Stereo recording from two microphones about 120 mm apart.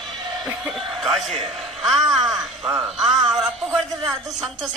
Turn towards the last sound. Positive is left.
turn(degrees=0)  # may be behind; listen again after turning